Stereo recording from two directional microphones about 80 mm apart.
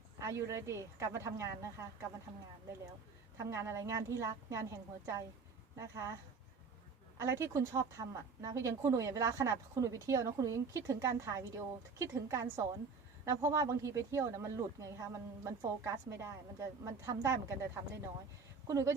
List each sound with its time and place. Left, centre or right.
0.2 s a woman's voice: right
3.3 s a woman's voice: right
7.2 s a woman's voice: right
18.7 s a woman's voice: right